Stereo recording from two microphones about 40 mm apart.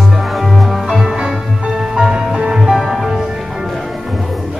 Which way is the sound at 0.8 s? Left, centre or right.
Centre.